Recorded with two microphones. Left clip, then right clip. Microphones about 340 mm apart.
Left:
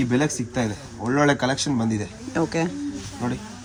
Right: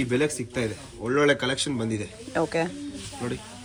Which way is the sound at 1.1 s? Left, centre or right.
Left.